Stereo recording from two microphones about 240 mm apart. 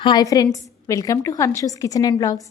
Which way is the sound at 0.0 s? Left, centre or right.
Centre.